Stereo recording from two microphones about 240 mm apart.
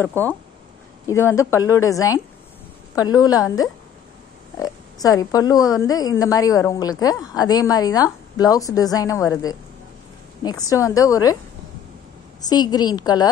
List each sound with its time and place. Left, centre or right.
1.0 s speech: centre
4.6 s speech: centre
10.4 s speech: centre
12.4 s speech: centre